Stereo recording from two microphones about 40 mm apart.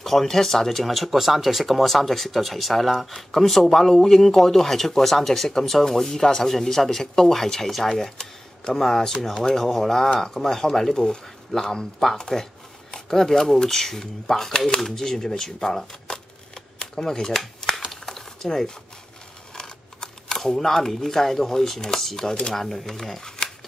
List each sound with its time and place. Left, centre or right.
0.0 s speech: centre
15.9 s shuffling cards: centre
17.7 s a sound: centre
18.4 s speech: centre
19.5 s speech: centre